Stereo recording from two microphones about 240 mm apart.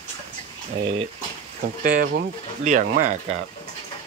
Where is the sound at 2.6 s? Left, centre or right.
Right.